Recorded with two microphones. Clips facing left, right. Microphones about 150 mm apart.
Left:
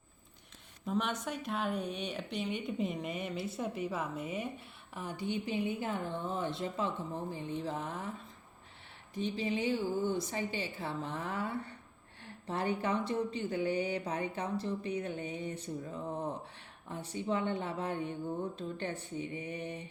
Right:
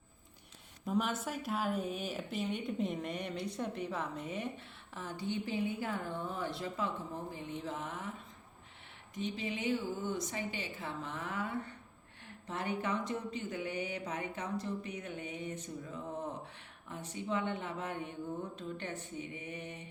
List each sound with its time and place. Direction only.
0.9 s a woman's voice: 5° right (ahead or behind); by 8.1 s 35° left (ahead or behind)
9.1 s speech: 30° left (ahead or behind)